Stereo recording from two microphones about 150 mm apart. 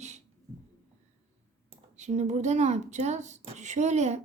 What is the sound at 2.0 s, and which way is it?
Speech, 50° right (ahead or behind).